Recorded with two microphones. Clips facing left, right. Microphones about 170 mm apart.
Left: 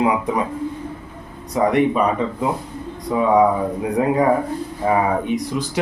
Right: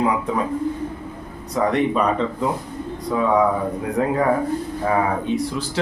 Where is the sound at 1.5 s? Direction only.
10° left (ahead or behind).